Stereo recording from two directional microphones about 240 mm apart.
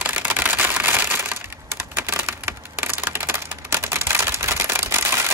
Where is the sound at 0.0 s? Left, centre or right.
Centre.